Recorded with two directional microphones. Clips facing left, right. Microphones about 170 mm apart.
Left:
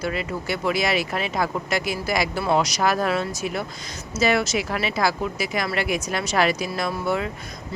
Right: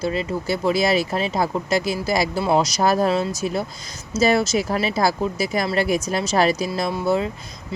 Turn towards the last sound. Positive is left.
turn(degrees=-30)  # may be behind; listen again after turning